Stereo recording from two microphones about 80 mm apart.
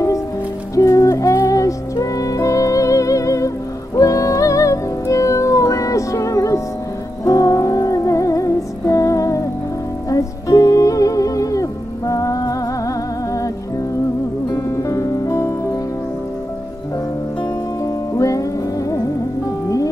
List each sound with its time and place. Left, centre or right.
0.7 s music: left
14.5 s music: left
18.1 s music: left